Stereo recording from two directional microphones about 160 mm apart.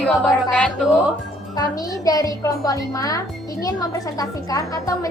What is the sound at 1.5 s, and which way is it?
Speech, 20° left (ahead or behind).